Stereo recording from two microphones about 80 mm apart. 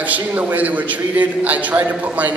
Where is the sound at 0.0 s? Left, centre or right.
Centre.